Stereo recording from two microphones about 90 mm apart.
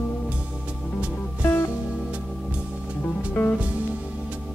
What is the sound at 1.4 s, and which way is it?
Music, 25° left (ahead or behind).